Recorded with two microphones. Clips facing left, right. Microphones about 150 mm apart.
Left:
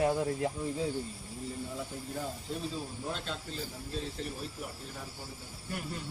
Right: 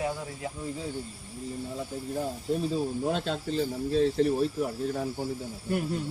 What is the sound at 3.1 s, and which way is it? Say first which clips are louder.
Speech: right 9 dB; 65° right (ahead or behind).